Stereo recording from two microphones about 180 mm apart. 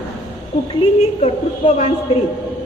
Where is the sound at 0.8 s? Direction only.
35° left (ahead or behind).